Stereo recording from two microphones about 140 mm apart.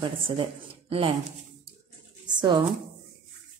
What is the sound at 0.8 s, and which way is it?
Speech, 45° right (ahead or behind).